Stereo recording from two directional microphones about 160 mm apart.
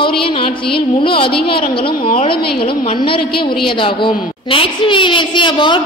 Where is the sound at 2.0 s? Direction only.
60° left (ahead or behind).